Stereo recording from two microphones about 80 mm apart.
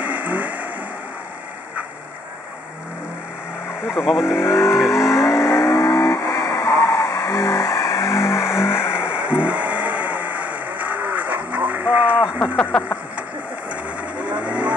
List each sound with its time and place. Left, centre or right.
0.0 s vehicle: centre
4.0 s speech: centre
4.3 s speech: left
4.9 s vehicle: left
8.9 s vehicle: centre
12.4 s a sound: centre
14.1 s vehicle: centre